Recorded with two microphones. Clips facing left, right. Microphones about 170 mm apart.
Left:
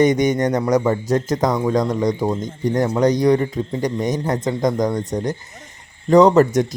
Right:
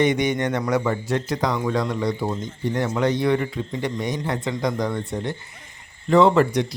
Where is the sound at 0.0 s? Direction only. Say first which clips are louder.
Left 5 dB; 40° left (ahead or behind).